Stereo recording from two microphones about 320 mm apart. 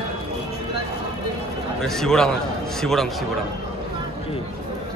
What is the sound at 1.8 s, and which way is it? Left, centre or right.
A man's voice, centre.